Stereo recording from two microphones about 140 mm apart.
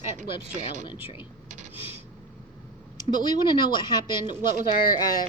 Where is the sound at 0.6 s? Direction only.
60° right (ahead or behind).